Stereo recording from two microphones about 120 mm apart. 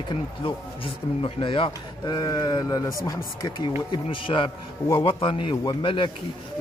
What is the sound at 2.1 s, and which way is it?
Speech, 30° left (ahead or behind).